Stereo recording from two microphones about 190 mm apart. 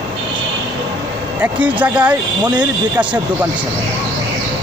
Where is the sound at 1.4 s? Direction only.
5° right (ahead or behind).